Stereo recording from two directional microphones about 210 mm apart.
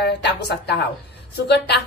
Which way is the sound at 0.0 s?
55° left (ahead or behind).